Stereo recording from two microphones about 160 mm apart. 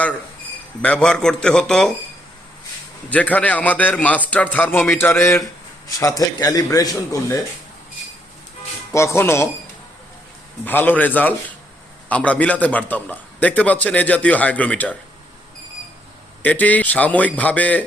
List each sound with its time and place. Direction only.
0.8 s speech: 5° left (ahead or behind)
3.1 s a man's voice: 10° left (ahead or behind)
8.9 s a man's voice: 15° left (ahead or behind)
10.7 s a man's voice: 10° left (ahead or behind)
16.4 s a man's voice: 10° left (ahead or behind)